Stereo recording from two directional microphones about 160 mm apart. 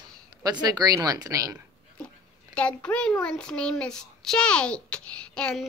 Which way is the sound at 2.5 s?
5° left (ahead or behind).